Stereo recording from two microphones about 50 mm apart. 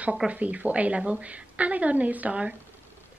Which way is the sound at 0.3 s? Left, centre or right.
Right.